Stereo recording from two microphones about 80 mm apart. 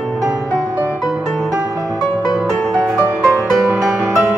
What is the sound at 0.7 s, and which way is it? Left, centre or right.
Music, right.